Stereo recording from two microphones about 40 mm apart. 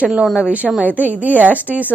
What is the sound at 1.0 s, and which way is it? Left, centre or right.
Speech, right.